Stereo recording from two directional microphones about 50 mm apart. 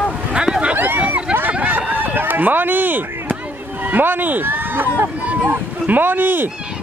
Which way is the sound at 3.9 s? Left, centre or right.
Right.